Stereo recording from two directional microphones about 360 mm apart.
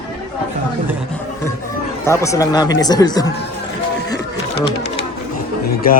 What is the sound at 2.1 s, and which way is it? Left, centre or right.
Speech, centre.